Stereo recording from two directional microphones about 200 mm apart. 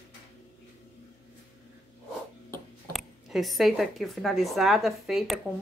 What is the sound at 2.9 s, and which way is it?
Speech, centre (ahead or behind).